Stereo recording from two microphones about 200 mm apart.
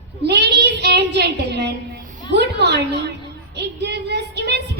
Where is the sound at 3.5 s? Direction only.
55° right (ahead or behind).